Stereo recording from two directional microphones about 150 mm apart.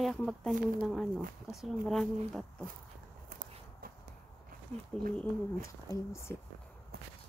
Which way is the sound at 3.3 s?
60° right (ahead or behind).